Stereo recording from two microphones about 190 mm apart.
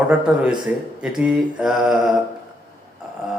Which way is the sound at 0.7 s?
10° right (ahead or behind).